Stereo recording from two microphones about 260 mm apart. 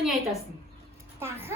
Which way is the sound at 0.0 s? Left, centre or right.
Centre.